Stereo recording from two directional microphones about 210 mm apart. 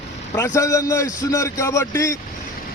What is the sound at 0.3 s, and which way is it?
A man's voice, 15° left (ahead or behind).